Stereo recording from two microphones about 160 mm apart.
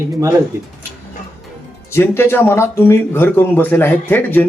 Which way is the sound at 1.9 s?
15° left (ahead or behind).